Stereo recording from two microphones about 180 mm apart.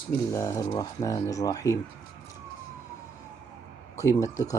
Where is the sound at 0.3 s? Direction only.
20° left (ahead or behind).